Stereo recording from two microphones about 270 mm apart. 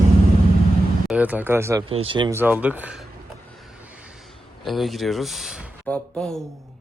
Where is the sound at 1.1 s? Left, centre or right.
Centre.